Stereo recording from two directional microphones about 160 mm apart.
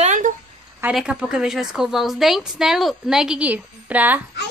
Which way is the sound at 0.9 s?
5° right (ahead or behind).